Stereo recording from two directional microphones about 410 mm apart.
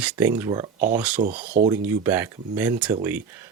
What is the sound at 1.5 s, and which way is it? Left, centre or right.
Speech, centre.